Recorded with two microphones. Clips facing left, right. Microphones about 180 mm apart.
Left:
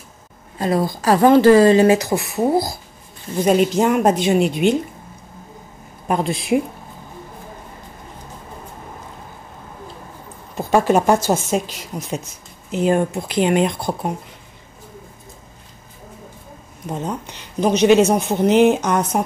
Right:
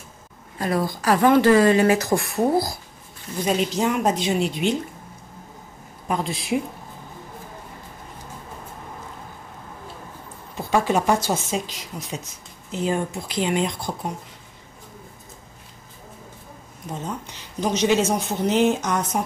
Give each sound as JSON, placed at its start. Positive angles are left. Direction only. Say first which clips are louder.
{"t": 0.6, "sound": "a woman's voice", "louder": "left 4 dB", "side_deg": 25}
{"t": 2.0, "sound": "speech", "louder": "left 1 dB", "side_deg": 5}
{"t": 3.4, "sound": "a woman's voice", "louder": "left 6 dB", "side_deg": 50}
{"t": 6.0, "sound": "speech", "louder": "left 5 dB", "side_deg": 60}
{"t": 10.6, "sound": "a woman's voice", "louder": "left 5 dB", "side_deg": 50}
{"t": 12.7, "sound": "speech", "louder": "left 7 dB", "side_deg": 60}
{"t": 17.6, "sound": "speech", "louder": "left 7 dB", "side_deg": 60}